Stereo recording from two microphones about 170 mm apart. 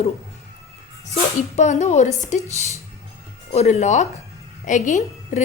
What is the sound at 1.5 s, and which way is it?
Speech, 45° left (ahead or behind).